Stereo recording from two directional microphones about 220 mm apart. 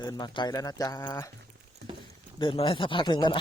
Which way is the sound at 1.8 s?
50° right (ahead or behind).